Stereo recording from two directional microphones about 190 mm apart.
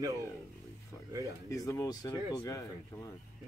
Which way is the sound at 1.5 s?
15° left (ahead or behind).